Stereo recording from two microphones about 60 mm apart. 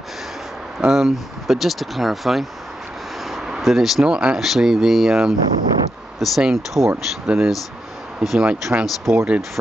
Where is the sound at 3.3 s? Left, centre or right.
Centre.